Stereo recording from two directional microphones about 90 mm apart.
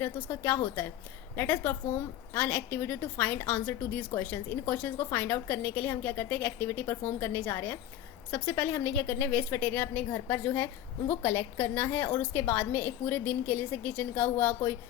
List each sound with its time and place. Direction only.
0.0 s a woman's voice: 25° left (ahead or behind)